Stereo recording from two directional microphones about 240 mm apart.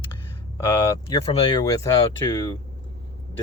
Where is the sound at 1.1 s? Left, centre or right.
Left.